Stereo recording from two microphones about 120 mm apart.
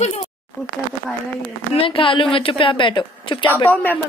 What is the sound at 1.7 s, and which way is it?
A woman's voice, 50° left (ahead or behind).